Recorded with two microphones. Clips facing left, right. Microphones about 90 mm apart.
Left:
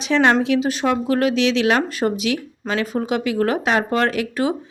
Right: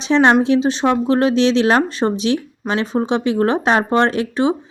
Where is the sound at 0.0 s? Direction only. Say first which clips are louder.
Right 3 dB; 30° right (ahead or behind).